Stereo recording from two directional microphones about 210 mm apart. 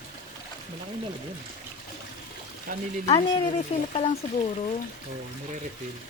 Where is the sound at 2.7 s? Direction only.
40° right (ahead or behind).